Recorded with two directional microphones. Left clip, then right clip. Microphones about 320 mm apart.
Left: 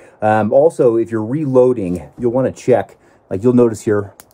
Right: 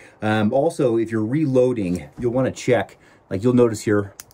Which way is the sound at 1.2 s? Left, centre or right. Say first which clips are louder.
Left 3 dB; left.